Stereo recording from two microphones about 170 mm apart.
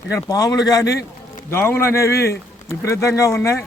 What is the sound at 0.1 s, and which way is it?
A man's voice, 20° left (ahead or behind).